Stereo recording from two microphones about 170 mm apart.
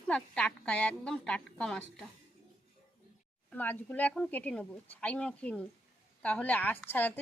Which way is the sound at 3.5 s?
10° left (ahead or behind).